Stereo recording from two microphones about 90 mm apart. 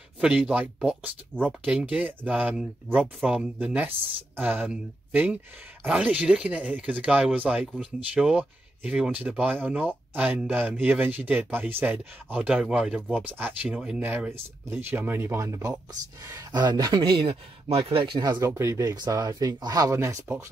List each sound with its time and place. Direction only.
0.2 s speech: 10° right (ahead or behind)
3.5 s speech: 20° right (ahead or behind)
13.2 s speech: 20° right (ahead or behind)
13.7 s speech: 5° right (ahead or behind)
14.0 s speech: 20° right (ahead or behind)
15.3 s speech: 35° right (ahead or behind)
17.0 s speech: 70° right (ahead or behind)
18.4 s speech: 35° right (ahead or behind)
18.8 s speech: 45° right (ahead or behind)